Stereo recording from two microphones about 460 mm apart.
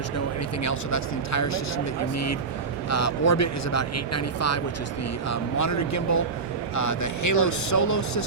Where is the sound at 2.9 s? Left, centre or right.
Left.